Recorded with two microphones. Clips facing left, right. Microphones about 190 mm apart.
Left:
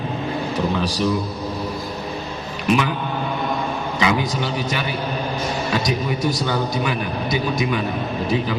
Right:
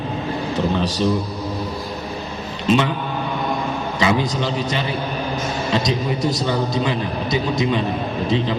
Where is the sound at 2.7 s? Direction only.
25° right (ahead or behind).